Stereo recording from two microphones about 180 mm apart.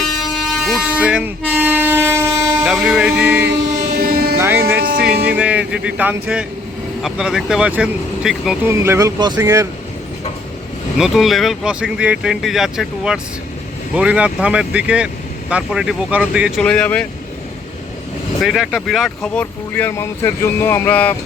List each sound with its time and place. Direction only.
0.0 s air horn: centre (ahead or behind)
2.6 s speech: 5° right (ahead or behind)
3.9 s vehicle: 55° right (ahead or behind)
4.4 s music: 15° right (ahead or behind)
7.0 s speech: 5° right (ahead or behind)
8.6 s music: 15° right (ahead or behind)
10.9 s speech: 5° right (ahead or behind)
16.6 s speech: 5° left (ahead or behind)
18.4 s speech: centre (ahead or behind)